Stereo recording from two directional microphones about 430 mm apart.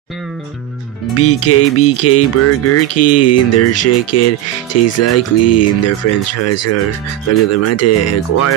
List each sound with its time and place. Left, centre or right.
1.1 s speech: left